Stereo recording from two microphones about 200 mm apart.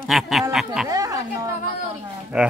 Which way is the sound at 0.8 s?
15° right (ahead or behind).